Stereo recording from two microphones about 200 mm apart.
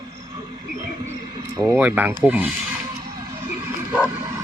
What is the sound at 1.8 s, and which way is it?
Speech, 10° right (ahead or behind).